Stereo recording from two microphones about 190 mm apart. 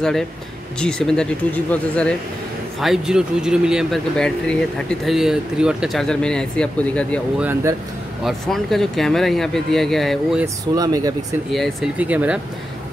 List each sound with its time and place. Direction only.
0.7 s speech: 5° left (ahead or behind)
7.3 s speech: 10° right (ahead or behind)
10.4 s speech: 20° right (ahead or behind)
11.5 s speech: centre (ahead or behind)